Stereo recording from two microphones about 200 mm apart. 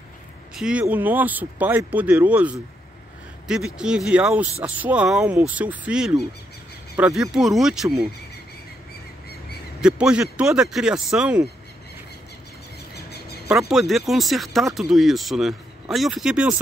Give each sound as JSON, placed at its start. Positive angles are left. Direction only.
{"t": 0.6, "sound": "speech", "side_deg": -5}
{"t": 9.8, "sound": "speech", "side_deg": -5}
{"t": 12.9, "sound": "a sound", "side_deg": 55}
{"t": 13.5, "sound": "speech", "side_deg": 0}